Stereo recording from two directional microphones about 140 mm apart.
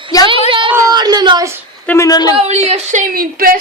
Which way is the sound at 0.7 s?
25° right (ahead or behind).